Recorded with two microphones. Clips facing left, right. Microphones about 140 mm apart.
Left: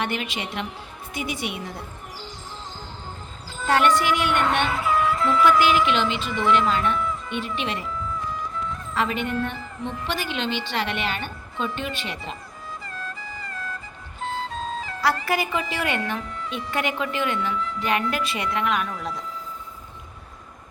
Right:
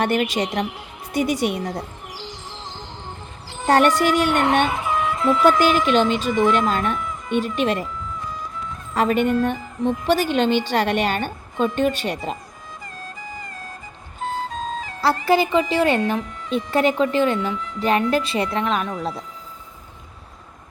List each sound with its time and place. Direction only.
0.0 s a woman's voice: 45° right (ahead or behind)
1.6 s music: 80° right
3.7 s a woman's voice: 40° right (ahead or behind)
4.6 s music: 20° right (ahead or behind)
5.5 s speech: 40° right (ahead or behind)
9.0 s speech: 45° right (ahead or behind)
15.0 s a woman's voice: 25° right (ahead or behind)